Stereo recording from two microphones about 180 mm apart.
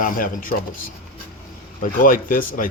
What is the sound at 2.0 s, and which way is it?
Speech, 50° left (ahead or behind).